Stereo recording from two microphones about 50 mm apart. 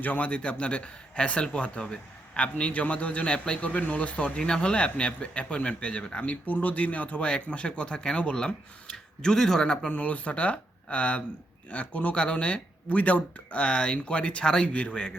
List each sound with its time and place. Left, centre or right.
0.0 s a man's voice: left; by 9.7 s centre
9.8 s speech: left